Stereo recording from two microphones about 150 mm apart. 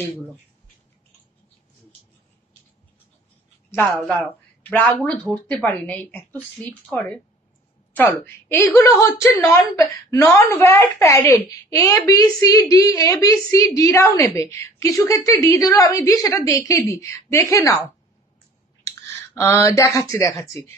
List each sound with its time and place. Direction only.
3.7 s speech: 10° left (ahead or behind)
7.9 s a woman's voice: 15° left (ahead or behind)
19.0 s speech: 15° left (ahead or behind)